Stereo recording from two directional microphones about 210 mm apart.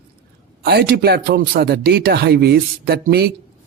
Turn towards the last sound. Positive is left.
turn(degrees=-50)  # may be behind; listen again after turning